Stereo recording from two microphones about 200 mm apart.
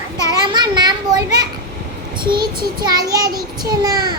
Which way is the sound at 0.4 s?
20° right (ahead or behind).